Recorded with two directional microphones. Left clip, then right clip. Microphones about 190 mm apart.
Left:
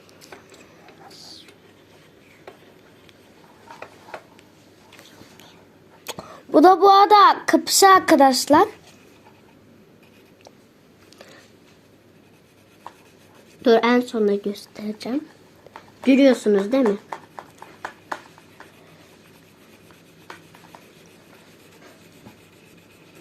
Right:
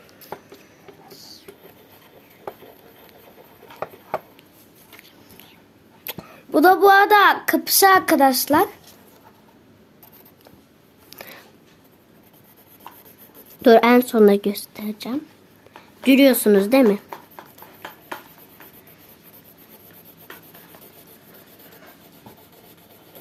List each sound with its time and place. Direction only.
6.1 s a woman's voice: centre (ahead or behind)
11.1 s a sound: 50° right (ahead or behind)
13.6 s speech: 45° right (ahead or behind); by 15.2 s 20° right (ahead or behind)
16.0 s speech: 35° right (ahead or behind)